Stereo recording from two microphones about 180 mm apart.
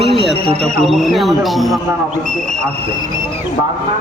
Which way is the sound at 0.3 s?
35° right (ahead or behind).